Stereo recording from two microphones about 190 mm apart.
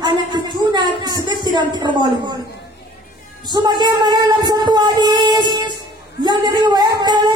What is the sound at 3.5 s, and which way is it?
Speech, 25° right (ahead or behind).